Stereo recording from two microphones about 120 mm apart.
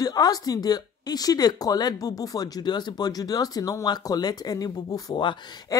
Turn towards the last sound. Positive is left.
turn(degrees=35)  # may be behind; listen again after turning